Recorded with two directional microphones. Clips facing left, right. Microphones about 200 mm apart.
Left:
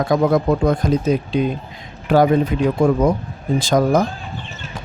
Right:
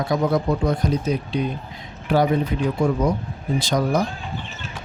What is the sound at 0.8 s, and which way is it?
Speech, 90° left.